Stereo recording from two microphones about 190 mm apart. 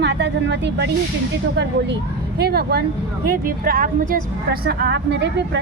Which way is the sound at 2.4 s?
55° right (ahead or behind).